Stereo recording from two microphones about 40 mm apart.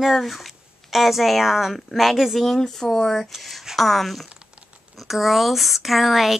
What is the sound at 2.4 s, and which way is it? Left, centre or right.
Speech, centre.